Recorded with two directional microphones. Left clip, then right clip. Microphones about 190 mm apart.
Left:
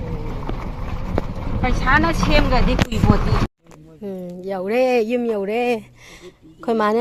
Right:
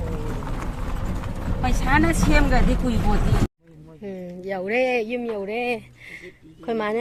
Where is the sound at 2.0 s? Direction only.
30° right (ahead or behind).